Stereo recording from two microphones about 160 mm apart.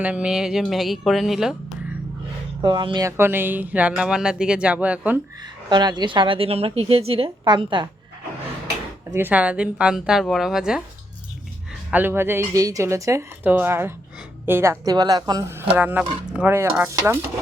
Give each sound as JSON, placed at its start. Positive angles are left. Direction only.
{"t": 0.0, "sound": "speech", "side_deg": -10}
{"t": 2.6, "sound": "speech", "side_deg": -30}
{"t": 5.6, "sound": "a woman's voice", "side_deg": -25}
{"t": 9.1, "sound": "speech", "side_deg": -10}
{"t": 11.9, "sound": "a woman's voice", "side_deg": -10}